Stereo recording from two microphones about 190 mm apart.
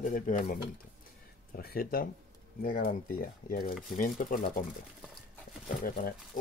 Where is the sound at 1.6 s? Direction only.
50° left (ahead or behind).